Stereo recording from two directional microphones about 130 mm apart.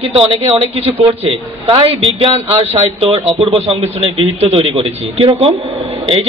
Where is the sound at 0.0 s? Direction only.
45° right (ahead or behind).